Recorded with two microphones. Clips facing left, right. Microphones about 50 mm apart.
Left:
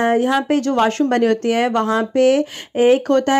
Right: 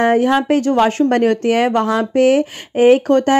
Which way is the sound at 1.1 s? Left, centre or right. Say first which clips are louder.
Right 2 dB; right.